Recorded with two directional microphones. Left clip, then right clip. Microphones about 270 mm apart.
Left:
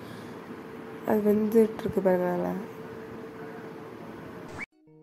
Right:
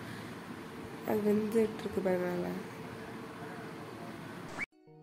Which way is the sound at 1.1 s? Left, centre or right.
Centre.